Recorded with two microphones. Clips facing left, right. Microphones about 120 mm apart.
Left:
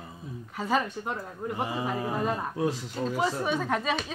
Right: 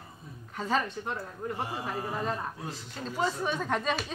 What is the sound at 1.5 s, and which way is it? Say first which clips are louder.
Speech: left 5 dB; 85° left.